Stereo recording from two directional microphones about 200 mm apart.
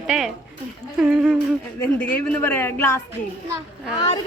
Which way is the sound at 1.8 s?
5° left (ahead or behind).